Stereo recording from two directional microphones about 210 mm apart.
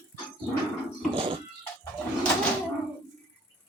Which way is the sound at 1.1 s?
25° right (ahead or behind).